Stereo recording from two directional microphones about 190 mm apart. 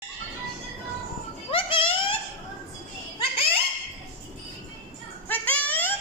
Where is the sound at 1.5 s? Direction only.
30° left (ahead or behind).